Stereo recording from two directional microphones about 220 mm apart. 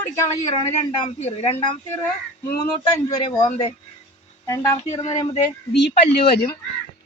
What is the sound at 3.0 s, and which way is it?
Speech, 20° left (ahead or behind).